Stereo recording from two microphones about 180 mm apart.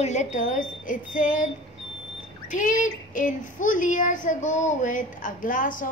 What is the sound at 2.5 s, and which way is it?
Speech, 45° left (ahead or behind).